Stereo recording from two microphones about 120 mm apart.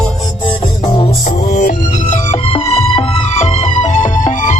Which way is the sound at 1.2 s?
85° left.